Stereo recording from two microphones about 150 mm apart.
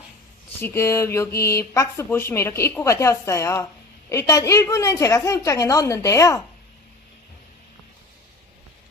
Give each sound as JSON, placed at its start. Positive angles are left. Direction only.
{"t": 0.6, "sound": "a woman's voice", "side_deg": 15}